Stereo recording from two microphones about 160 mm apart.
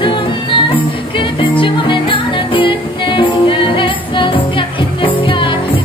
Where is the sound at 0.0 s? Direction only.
30° left (ahead or behind).